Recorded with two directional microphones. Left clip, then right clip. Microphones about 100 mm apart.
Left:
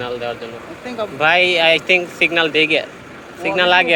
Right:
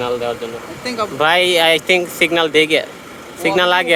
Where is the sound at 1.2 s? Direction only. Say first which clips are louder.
Even; 55° right (ahead or behind).